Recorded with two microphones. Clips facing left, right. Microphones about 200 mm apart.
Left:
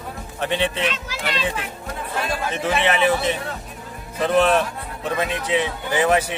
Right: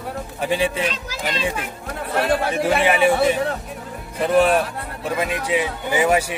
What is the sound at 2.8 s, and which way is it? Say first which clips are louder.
Speech: right 2 dB; 10° right (ahead or behind).